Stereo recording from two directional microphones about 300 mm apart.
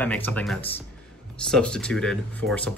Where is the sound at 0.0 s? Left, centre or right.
Centre.